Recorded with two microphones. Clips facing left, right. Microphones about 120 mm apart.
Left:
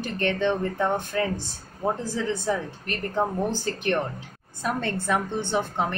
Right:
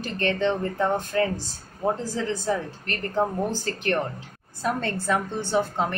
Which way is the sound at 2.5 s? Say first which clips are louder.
Even; 15° left (ahead or behind).